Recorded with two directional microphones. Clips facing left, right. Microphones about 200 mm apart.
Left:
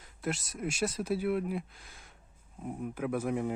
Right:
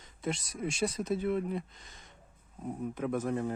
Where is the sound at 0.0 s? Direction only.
5° left (ahead or behind).